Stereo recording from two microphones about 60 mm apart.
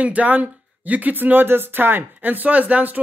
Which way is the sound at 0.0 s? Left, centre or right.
Right.